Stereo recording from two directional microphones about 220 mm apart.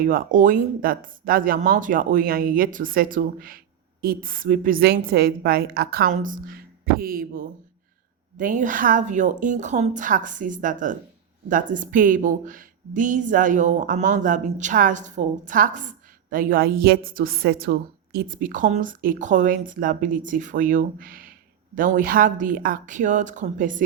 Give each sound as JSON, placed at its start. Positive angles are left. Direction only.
{"t": 0.0, "sound": "a woman's voice", "side_deg": -40}